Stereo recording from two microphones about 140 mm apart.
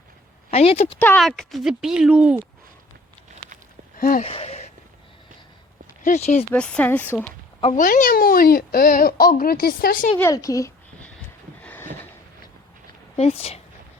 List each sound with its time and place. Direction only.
0.5 s a woman's voice: 45° left (ahead or behind)
0.9 s speech: 10° left (ahead or behind)
1.2 s speech: centre (ahead or behind)
3.9 s a sound: 90° left
4.2 s a sound: 45° left (ahead or behind)
6.0 s speech: 60° left (ahead or behind)
6.5 s speech: 10° left (ahead or behind)
7.6 s speech: 60° left (ahead or behind); by 10.1 s 85° left
10.2 s a woman's voice: 20° left (ahead or behind)
11.6 s a sound: 10° left (ahead or behind)
13.1 s a woman's voice: 50° left (ahead or behind)